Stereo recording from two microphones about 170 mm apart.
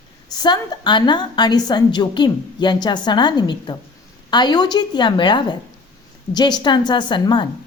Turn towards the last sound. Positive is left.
turn(degrees=25)  # may be behind; listen again after turning